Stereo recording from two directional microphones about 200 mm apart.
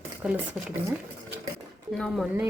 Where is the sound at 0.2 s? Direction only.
5° right (ahead or behind).